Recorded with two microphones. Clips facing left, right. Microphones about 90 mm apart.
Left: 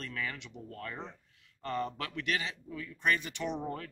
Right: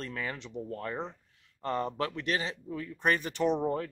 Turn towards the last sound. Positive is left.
turn(degrees=-30)  # may be behind; listen again after turning